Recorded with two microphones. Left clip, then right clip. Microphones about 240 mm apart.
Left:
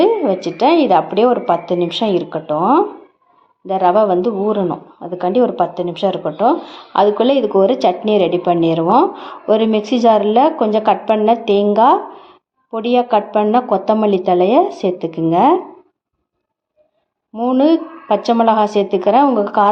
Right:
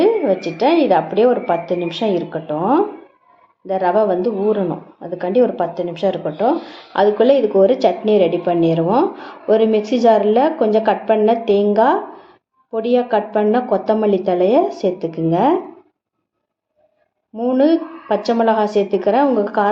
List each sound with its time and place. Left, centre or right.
0.0 s speech: left
17.3 s speech: left